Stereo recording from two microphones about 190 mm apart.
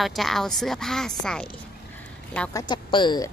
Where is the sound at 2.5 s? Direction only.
25° left (ahead or behind).